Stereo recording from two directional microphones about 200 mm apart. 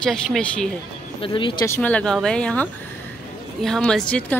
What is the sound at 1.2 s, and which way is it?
Speech, 25° left (ahead or behind).